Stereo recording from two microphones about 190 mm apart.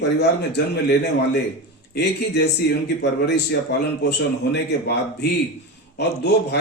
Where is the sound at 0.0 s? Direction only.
60° left (ahead or behind).